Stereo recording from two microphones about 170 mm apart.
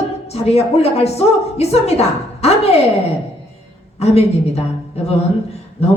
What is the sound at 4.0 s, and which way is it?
Speech, 40° left (ahead or behind).